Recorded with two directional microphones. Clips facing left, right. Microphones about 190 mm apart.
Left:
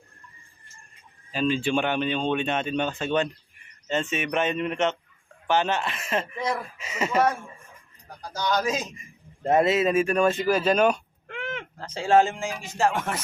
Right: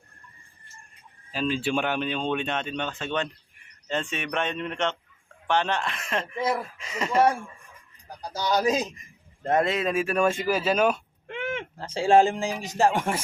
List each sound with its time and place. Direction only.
1.3 s speech: centre (ahead or behind)
6.7 s a sound: 5° left (ahead or behind)
8.6 s speech: 35° right (ahead or behind)
9.4 s speech: 5° left (ahead or behind)
11.3 s a sound: 25° right (ahead or behind)
11.9 s speech: 30° right (ahead or behind)